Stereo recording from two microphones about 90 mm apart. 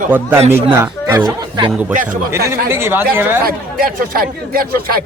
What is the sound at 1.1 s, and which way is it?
Speech, 45° right (ahead or behind).